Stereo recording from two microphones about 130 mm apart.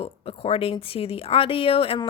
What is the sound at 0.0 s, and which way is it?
A woman's voice, 45° left (ahead or behind).